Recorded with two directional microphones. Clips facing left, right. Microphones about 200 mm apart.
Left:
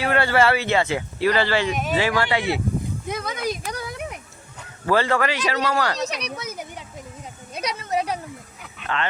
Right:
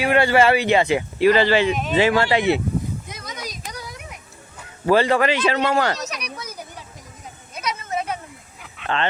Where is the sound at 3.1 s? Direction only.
55° left (ahead or behind).